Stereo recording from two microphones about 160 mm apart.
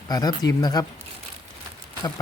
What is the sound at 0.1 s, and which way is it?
Speech, 25° left (ahead or behind).